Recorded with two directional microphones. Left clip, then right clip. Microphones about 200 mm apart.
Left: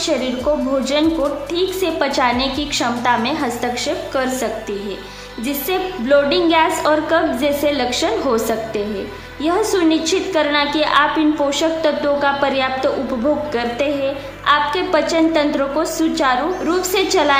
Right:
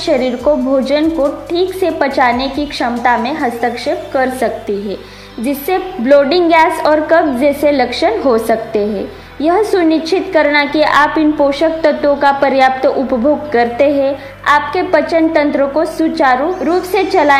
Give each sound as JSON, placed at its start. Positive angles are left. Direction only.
{"t": 0.0, "sound": "speech", "side_deg": -20}
{"t": 1.0, "sound": "a woman's voice", "side_deg": 0}
{"t": 1.5, "sound": "a woman's voice", "side_deg": -20}